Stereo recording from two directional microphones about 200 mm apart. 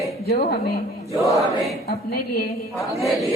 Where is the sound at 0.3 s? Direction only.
50° left (ahead or behind).